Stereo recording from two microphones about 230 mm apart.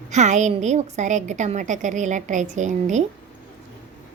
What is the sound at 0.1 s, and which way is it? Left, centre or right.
A woman's voice, right.